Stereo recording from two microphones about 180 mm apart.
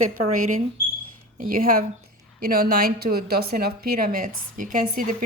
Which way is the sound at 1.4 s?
50° right (ahead or behind).